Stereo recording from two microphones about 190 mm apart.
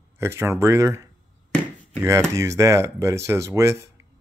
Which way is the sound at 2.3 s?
15° right (ahead or behind).